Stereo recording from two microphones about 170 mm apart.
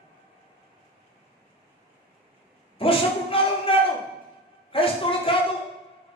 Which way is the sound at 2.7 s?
30° left (ahead or behind).